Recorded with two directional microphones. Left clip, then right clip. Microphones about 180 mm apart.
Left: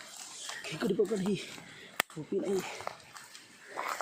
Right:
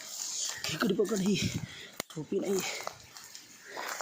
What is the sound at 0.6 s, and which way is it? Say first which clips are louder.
Speech: right 1 dB; 25° right (ahead or behind).